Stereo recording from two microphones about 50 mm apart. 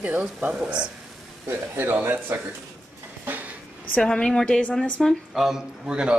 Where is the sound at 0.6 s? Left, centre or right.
Right.